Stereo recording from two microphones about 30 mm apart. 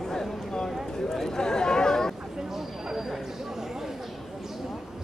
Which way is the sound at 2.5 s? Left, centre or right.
Centre.